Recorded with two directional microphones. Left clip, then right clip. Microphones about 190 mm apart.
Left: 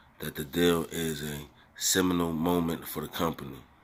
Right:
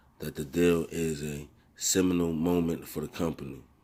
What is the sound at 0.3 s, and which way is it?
Speech, 25° right (ahead or behind).